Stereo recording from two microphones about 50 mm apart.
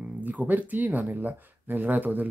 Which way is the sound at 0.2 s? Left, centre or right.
Right.